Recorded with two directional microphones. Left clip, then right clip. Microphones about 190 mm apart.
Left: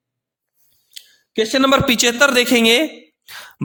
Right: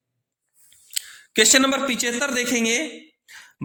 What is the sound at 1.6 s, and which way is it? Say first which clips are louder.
Speech: left 8 dB; 50° left (ahead or behind).